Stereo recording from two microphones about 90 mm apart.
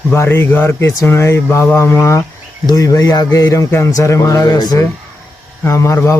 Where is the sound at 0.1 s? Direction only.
25° left (ahead or behind); by 4.9 s 45° left (ahead or behind).